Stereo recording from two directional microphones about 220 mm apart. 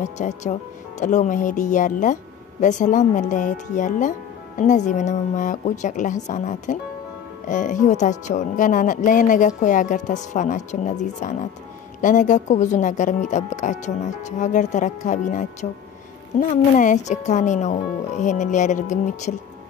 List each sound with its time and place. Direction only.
0.0 s speech: 30° left (ahead or behind)